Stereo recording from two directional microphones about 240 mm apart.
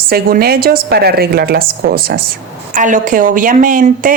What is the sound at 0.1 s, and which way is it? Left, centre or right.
A woman's voice, right.